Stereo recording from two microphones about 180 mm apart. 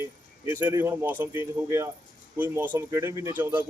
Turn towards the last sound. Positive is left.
turn(degrees=-10)  # may be behind; listen again after turning